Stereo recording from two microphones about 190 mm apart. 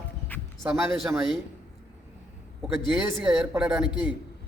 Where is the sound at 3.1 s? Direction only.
Centre (ahead or behind).